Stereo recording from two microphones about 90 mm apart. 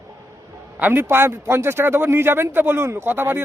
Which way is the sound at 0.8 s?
25° right (ahead or behind).